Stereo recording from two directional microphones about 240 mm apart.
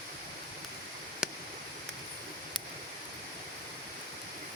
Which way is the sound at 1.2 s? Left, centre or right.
Centre.